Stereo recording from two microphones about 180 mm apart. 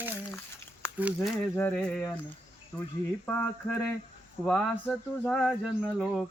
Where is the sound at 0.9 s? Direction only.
5° right (ahead or behind).